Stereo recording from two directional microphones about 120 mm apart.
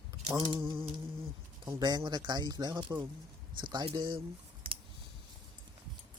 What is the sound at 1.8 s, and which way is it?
Speech, 35° right (ahead or behind).